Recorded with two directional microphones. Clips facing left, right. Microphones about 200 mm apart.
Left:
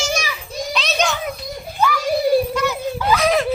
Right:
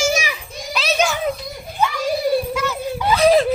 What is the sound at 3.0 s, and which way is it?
Laughter, 25° right (ahead or behind).